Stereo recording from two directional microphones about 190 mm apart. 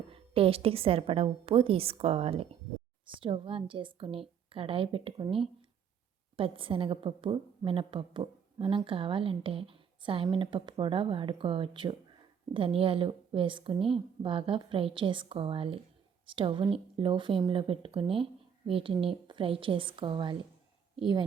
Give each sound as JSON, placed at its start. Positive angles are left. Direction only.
{"t": 0.1, "sound": "a woman's voice", "side_deg": -30}